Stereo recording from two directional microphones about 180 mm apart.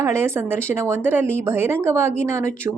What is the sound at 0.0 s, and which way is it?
A woman's voice, 15° right (ahead or behind).